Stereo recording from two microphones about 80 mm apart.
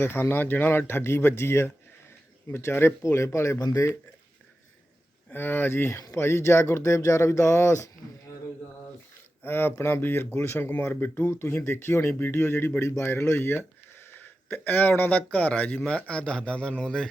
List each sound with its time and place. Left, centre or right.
0.0 s speech: left
3.6 s speech: left
5.3 s speech: left
9.4 s a man's voice: left; by 17.1 s centre